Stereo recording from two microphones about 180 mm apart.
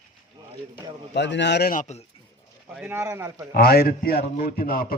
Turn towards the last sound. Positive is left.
turn(degrees=55)  # may be behind; listen again after turning